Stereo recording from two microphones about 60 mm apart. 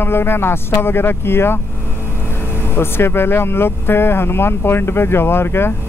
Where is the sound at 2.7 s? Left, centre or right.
Left.